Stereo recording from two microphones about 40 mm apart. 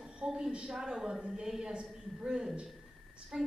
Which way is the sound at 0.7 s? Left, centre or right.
Centre.